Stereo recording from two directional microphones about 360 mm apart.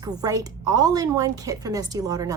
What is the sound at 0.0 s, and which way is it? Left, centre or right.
A woman's voice, centre.